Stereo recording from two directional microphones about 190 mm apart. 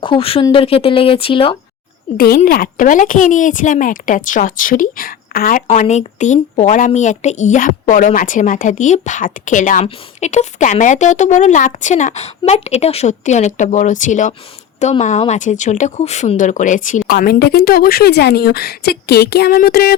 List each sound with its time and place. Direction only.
0.0 s speech: 30° left (ahead or behind)
2.1 s speech: 50° left (ahead or behind)